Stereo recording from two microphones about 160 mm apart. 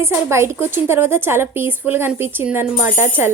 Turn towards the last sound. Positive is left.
turn(degrees=-15)  # may be behind; listen again after turning